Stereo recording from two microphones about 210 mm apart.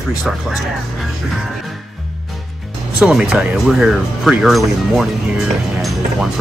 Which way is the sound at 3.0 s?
5° right (ahead or behind).